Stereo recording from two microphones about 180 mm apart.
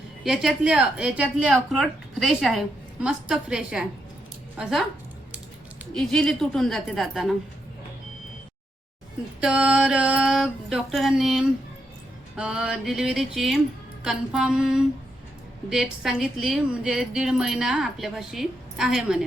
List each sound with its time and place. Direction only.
0.3 s speech: 5° right (ahead or behind)
5.9 s speech: centre (ahead or behind)
9.4 s speech: 5° right (ahead or behind)